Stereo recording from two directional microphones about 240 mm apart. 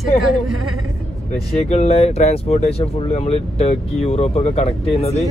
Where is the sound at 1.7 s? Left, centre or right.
Left.